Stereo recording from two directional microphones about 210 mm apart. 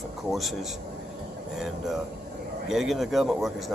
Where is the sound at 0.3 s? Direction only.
Centre (ahead or behind).